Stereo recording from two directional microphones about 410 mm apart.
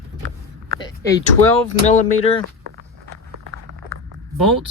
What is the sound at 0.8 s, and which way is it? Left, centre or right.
Speech, centre.